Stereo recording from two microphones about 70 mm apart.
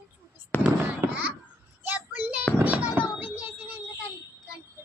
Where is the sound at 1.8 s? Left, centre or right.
Right.